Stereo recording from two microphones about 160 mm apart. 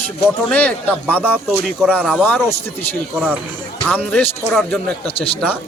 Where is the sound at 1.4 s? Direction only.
Centre (ahead or behind).